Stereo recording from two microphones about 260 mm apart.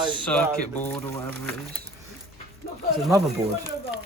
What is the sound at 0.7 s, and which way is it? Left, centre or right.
Speech, centre.